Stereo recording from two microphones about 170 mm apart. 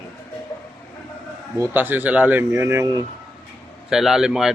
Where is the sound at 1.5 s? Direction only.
15° right (ahead or behind).